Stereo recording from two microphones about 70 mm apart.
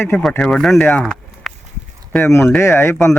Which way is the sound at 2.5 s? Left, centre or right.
Left.